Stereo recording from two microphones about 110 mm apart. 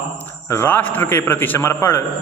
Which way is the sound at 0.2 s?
20° left (ahead or behind).